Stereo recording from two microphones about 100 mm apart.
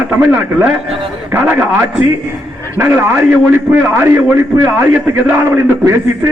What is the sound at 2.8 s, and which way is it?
A man's voice, 20° right (ahead or behind).